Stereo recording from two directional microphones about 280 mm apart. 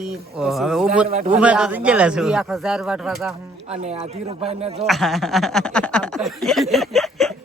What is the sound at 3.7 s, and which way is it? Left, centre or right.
Speech, right.